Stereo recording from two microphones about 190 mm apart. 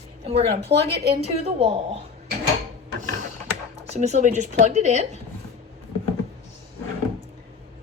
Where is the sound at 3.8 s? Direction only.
35° right (ahead or behind).